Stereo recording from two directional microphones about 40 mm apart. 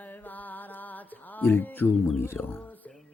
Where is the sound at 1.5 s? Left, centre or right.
Left.